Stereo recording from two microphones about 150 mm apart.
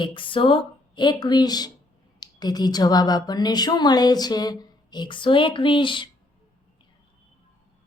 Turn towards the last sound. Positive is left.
turn(degrees=35)  # may be behind; listen again after turning